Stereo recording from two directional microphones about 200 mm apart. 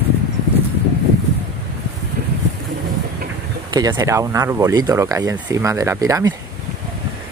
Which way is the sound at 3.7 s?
20° right (ahead or behind).